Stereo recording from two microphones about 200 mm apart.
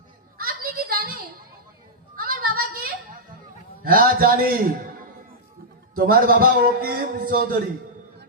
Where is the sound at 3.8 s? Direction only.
45° right (ahead or behind).